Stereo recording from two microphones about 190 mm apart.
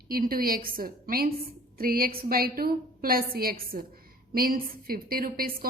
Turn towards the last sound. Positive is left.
turn(degrees=-50)  # may be behind; listen again after turning